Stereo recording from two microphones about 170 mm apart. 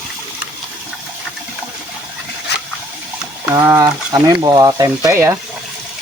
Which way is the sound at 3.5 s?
20° right (ahead or behind).